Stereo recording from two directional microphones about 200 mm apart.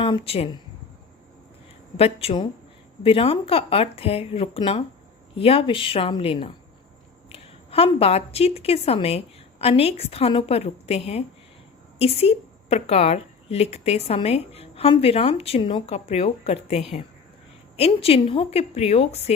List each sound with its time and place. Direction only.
0.0 s speech: 25° left (ahead or behind)
2.0 s a woman's voice: 30° left (ahead or behind)